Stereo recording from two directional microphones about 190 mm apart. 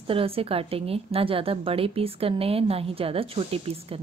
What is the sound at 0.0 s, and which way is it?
A woman's voice, 30° right (ahead or behind).